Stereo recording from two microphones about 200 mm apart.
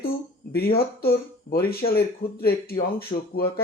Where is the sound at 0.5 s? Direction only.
50° left (ahead or behind).